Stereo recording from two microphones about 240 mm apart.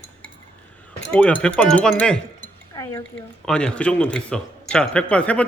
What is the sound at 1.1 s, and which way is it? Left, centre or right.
Speech, centre.